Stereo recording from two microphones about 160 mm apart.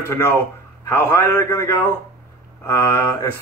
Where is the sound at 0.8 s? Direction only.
15° left (ahead or behind).